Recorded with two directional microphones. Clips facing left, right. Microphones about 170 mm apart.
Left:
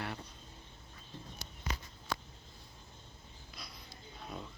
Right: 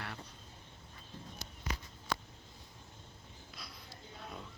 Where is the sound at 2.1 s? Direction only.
80° right.